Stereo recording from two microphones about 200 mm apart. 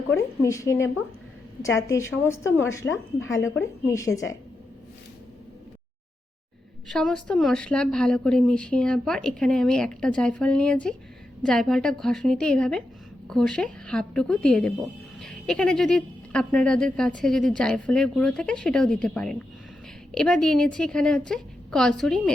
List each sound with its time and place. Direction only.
0.4 s a woman's voice: 15° left (ahead or behind)
6.8 s a woman's voice: centre (ahead or behind)